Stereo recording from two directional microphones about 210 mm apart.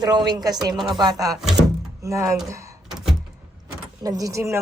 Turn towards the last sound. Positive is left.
turn(degrees=-15)  # may be behind; listen again after turning